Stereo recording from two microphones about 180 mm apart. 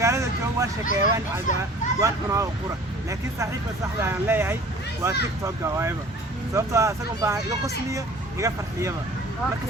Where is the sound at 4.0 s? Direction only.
10° right (ahead or behind).